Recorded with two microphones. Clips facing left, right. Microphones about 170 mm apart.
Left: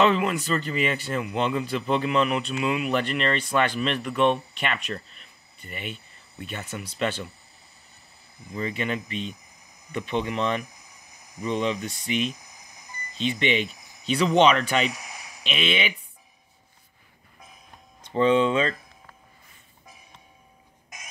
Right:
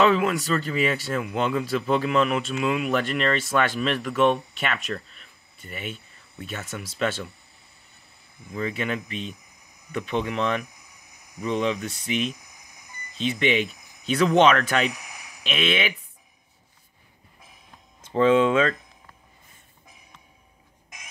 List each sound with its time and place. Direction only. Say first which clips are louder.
0.0 s speech: right 1 dB; centre (ahead or behind)
8.5 s speech: right 1 dB; centre (ahead or behind)
10.6 s a sound: even; 60° right (ahead or behind)
11.4 s speech: right 1 dB; centre (ahead or behind)
18.0 s speech: right 2 dB; 5° right (ahead or behind)